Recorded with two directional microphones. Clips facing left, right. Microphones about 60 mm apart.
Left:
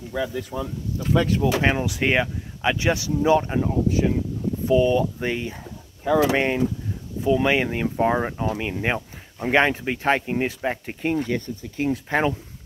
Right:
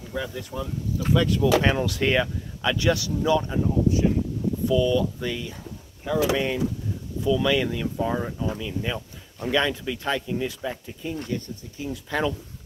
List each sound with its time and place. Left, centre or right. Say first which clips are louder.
0.5 s speech: even; left
1.1 s speech: left 1 dB; left
1.6 s speech: left 1 dB; centre
3.2 s speech: left 4 dB; left
3.5 s speech: left 1 dB; left
4.6 s speech: left 3 dB; left
7.2 s speech: left 2 dB; left
8.1 s speech: left 4 dB; left
9.5 s speech: left 4 dB; left
12.1 s speech: left 2 dB; left